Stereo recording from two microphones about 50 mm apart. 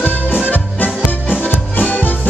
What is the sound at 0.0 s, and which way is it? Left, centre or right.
Music, left.